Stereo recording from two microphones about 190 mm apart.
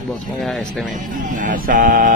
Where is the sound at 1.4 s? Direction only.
45° right (ahead or behind).